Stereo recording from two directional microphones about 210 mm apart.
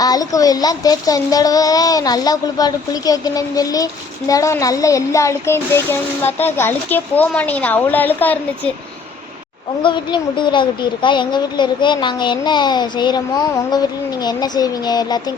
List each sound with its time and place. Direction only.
0.0 s speech: 15° left (ahead or behind)
9.8 s a woman's voice: 20° left (ahead or behind)